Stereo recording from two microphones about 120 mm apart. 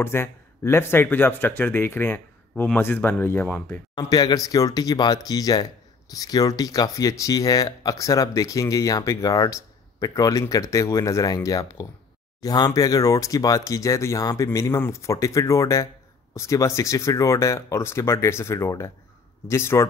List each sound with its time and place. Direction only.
0.0 s speech: 20° left (ahead or behind)
3.9 s speech: 35° left (ahead or behind)